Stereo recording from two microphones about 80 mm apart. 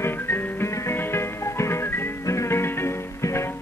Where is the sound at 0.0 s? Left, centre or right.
Left.